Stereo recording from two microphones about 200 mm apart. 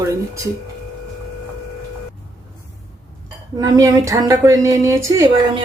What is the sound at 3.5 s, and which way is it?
A woman's voice, 15° right (ahead or behind).